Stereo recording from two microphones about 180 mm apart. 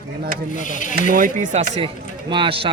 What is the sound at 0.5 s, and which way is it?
Speech, 45° left (ahead or behind).